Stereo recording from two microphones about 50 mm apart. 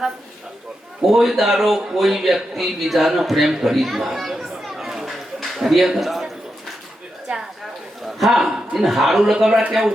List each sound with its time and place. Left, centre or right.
1.0 s a man's voice: centre
7.3 s a sound: right
8.0 s a man's voice: centre